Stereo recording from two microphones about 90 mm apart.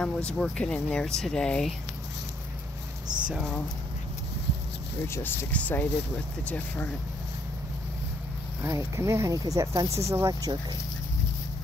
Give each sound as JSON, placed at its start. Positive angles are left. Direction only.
{"t": 0.0, "sound": "speech", "side_deg": 10}
{"t": 5.0, "sound": "speech", "side_deg": 30}
{"t": 5.5, "sound": "speech", "side_deg": 15}
{"t": 8.6, "sound": "speech", "side_deg": -35}